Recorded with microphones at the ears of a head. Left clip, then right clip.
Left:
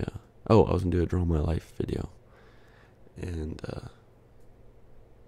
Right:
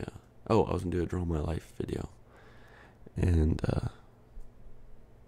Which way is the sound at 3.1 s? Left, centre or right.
Right.